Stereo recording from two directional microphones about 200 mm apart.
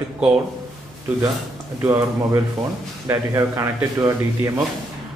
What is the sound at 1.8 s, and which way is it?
Speech, 15° right (ahead or behind).